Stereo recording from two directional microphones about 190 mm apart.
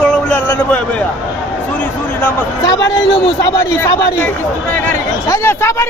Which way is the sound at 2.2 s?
15° left (ahead or behind).